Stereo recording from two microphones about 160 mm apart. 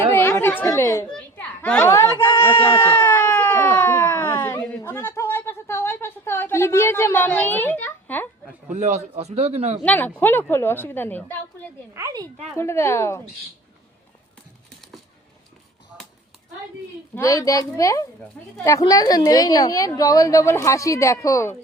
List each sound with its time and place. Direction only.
0.1 s chatter: 15° left (ahead or behind)
1.1 s children playing: 5° left (ahead or behind)
1.9 s speech: 20° left (ahead or behind)
8.7 s a man's voice: 45° right (ahead or behind)
9.8 s a woman's voice: 10° left (ahead or behind)
11.9 s speech: 20° right (ahead or behind)
12.5 s a woman's voice: 15° left (ahead or behind)
17.2 s a woman's voice: 20° left (ahead or behind)